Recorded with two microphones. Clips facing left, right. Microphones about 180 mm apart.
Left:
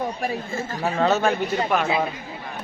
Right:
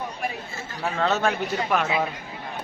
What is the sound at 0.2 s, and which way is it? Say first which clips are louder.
Speech: left 5 dB; 45° left (ahead or behind).